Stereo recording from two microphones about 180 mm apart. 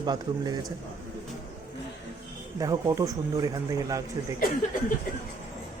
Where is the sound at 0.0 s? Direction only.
25° right (ahead or behind).